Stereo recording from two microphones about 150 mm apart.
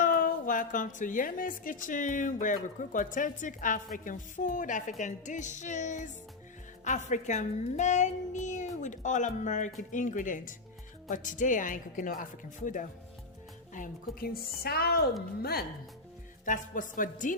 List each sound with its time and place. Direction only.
0.0 s a woman's voice: 65° left (ahead or behind)
13.7 s a woman's voice: 70° left (ahead or behind); by 15.6 s 90° left
16.5 s a woman's voice: 60° left (ahead or behind)